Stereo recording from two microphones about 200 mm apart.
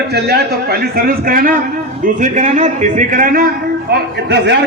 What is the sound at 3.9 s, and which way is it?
Speech, 60° right (ahead or behind).